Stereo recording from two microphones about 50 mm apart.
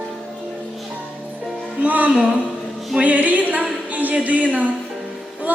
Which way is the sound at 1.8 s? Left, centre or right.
Right.